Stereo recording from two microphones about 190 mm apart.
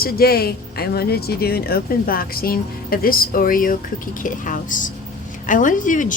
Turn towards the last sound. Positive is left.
turn(degrees=45)  # may be behind; listen again after turning